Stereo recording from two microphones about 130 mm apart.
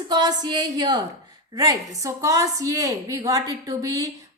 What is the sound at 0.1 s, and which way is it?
A woman's voice, 30° right (ahead or behind).